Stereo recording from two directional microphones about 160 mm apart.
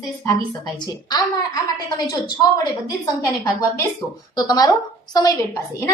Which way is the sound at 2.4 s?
20° left (ahead or behind).